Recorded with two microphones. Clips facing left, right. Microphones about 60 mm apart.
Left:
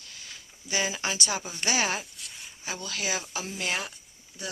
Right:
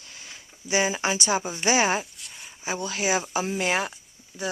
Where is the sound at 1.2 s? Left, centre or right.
Centre.